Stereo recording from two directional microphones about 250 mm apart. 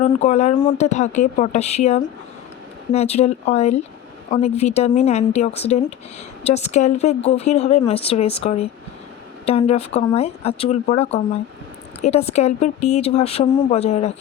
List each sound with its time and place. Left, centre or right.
0.0 s speech: left